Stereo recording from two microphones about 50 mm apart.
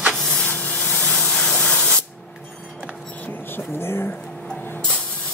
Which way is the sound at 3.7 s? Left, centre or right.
Left.